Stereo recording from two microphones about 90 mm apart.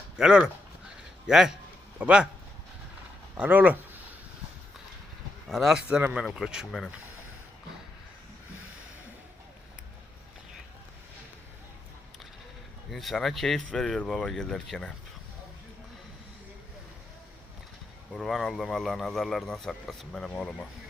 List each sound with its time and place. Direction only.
0.2 s speech: 10° right (ahead or behind)
3.3 s speech: 15° right (ahead or behind)
5.5 s speech: centre (ahead or behind)
6.7 s speech: 5° left (ahead or behind)
12.9 s speech: centre (ahead or behind)
18.1 s speech: 5° left (ahead or behind)